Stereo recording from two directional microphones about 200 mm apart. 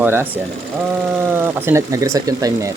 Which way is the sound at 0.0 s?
10° right (ahead or behind).